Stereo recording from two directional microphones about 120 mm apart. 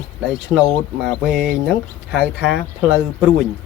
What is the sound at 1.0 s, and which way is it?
Speech, 5° left (ahead or behind).